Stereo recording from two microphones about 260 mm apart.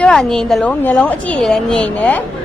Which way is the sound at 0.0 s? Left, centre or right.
Centre.